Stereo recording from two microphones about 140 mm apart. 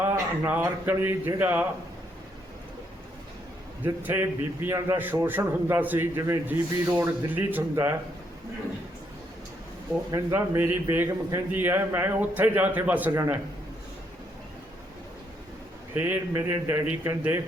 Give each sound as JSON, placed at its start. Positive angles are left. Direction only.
{"t": 0.0, "sound": "a man's voice", "side_deg": -15}
{"t": 3.8, "sound": "a man's voice", "side_deg": -15}
{"t": 10.1, "sound": "a man's voice", "side_deg": -20}
{"t": 16.0, "sound": "a man's voice", "side_deg": -15}